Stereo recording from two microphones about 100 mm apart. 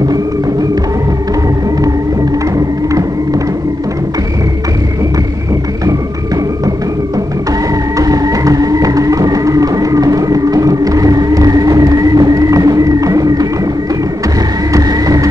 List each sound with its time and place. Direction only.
8.0 s music: 35° right (ahead or behind)
14.7 s vehicle: 40° right (ahead or behind)